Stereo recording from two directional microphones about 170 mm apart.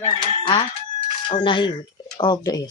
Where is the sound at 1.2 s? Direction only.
30° left (ahead or behind).